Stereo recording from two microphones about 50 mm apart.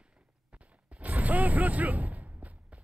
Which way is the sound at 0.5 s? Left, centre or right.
Right.